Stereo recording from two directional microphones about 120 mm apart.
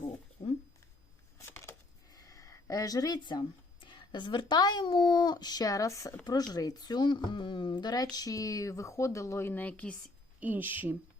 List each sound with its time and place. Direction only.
1.4 s a sound: 20° left (ahead or behind)
2.0 s speech: 30° left (ahead or behind); by 9.9 s 10° left (ahead or behind)
10.4 s speech: 15° right (ahead or behind)